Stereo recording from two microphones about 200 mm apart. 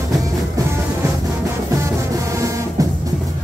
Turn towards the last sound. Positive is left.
turn(degrees=-15)  # may be behind; listen again after turning